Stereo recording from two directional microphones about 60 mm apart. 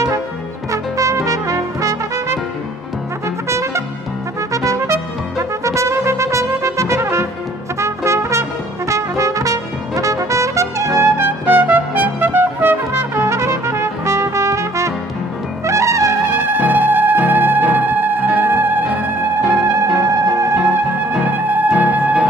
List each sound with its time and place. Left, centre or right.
0.7 s brass instrument: right
3.4 s trumpet: right
7.8 s brass instrument: right
11.0 s trumpet: right
15.6 s music: right
16.2 s music: right
18.9 s music: centre
20.0 s music: right
20.6 s music: centre
21.3 s music: right